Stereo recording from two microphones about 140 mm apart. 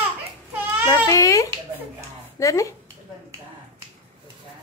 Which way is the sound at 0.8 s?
25° left (ahead or behind).